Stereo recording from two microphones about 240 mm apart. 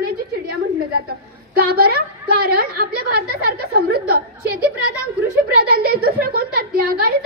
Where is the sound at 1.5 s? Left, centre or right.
Right.